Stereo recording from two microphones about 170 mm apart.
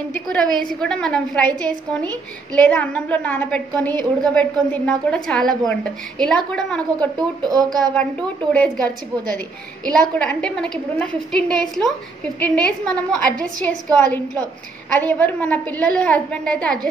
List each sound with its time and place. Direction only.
0.1 s a woman's voice: 5° left (ahead or behind)
7.0 s speech: 25° right (ahead or behind)
7.9 s a woman's voice: 10° left (ahead or behind)
14.9 s a woman's voice: 10° left (ahead or behind)